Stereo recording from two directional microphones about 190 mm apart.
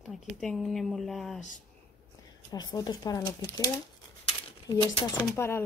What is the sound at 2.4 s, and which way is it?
Speech, 20° left (ahead or behind).